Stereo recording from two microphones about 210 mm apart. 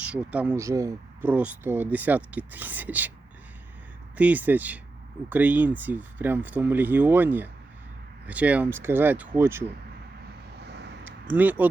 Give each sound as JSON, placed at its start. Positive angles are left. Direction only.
{"t": 0.0, "sound": "speech", "side_deg": -5}
{"t": 4.2, "sound": "speech", "side_deg": -5}
{"t": 10.6, "sound": "vehicle", "side_deg": -55}
{"t": 11.0, "sound": "a sound", "side_deg": -10}